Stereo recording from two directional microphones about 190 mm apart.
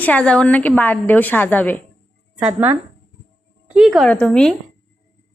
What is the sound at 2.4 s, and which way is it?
A woman's voice, 10° right (ahead or behind).